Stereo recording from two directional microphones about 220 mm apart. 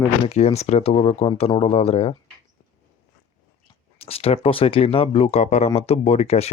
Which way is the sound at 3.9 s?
25° left (ahead or behind).